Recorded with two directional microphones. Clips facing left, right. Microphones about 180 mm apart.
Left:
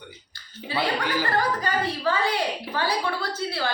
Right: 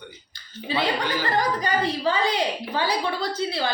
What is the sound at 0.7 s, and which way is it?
A woman's voice, 15° right (ahead or behind).